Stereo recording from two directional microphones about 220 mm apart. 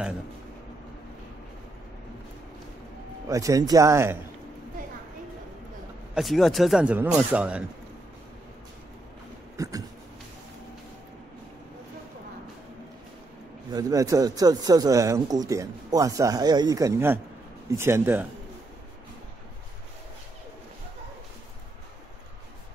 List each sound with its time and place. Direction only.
3.3 s speech: 15° right (ahead or behind)
6.1 s speech: centre (ahead or behind)
9.6 s a sound: 15° right (ahead or behind)
13.7 s speech: 15° right (ahead or behind)